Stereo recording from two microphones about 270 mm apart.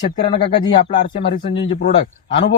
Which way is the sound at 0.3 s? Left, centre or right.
Centre.